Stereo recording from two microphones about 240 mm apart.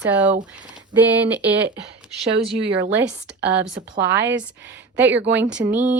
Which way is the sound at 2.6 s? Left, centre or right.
Right.